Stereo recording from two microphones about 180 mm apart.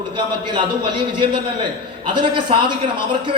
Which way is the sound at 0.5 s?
25° right (ahead or behind).